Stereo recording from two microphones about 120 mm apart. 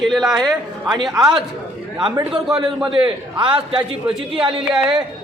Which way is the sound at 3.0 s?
45° right (ahead or behind).